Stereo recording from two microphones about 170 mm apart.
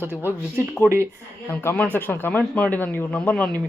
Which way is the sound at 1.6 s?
10° left (ahead or behind).